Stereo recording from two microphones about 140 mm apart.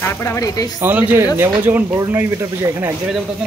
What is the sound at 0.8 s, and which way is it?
Speech, 15° right (ahead or behind).